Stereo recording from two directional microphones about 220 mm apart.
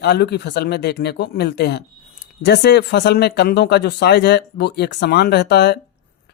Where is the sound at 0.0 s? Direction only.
50° left (ahead or behind).